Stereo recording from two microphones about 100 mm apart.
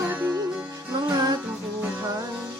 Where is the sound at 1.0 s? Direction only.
35° right (ahead or behind).